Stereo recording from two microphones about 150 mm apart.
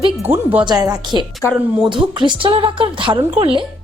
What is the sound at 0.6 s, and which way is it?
Speech, 25° right (ahead or behind).